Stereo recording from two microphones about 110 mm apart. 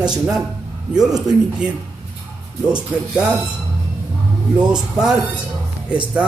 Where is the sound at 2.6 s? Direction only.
5° right (ahead or behind).